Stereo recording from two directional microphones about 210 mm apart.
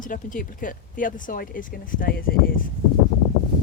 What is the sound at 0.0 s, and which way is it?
Speech, 40° left (ahead or behind).